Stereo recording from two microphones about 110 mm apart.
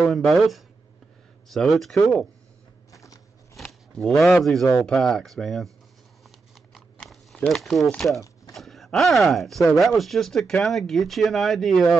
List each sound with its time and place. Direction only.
0.0 s speech: centre (ahead or behind)
2.9 s a sound: 30° left (ahead or behind)
3.5 s speech: 5° left (ahead or behind)
6.7 s biting: centre (ahead or behind)
7.3 s speech: 5° left (ahead or behind)